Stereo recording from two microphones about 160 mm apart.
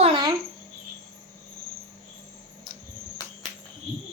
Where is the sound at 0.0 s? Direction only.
30° right (ahead or behind).